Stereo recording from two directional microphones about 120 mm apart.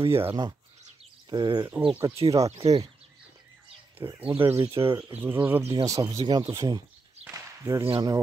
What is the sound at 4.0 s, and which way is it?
Speech, 25° right (ahead or behind).